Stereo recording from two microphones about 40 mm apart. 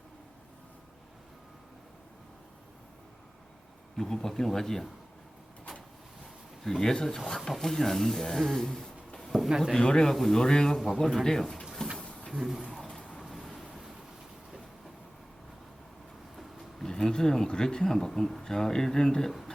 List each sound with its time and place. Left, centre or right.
3.9 s speech: centre
6.7 s speech: centre
10.8 s speech: centre
11.9 s a sound: left
12.4 s speech: centre
12.9 s a sound: left
13.2 s vehicle: centre
16.3 s vehicle: centre
16.8 s speech: centre